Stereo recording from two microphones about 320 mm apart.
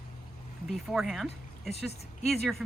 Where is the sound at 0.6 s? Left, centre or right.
Centre.